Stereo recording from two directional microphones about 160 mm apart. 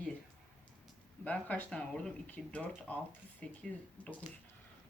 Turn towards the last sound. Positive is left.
turn(degrees=10)  # may be behind; listen again after turning